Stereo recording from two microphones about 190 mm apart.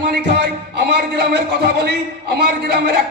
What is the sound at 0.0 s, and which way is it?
A man's voice, 65° right (ahead or behind).